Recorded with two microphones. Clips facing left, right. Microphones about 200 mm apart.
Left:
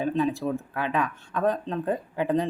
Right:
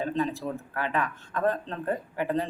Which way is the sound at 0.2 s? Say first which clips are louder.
Left 4 dB; 15° left (ahead or behind).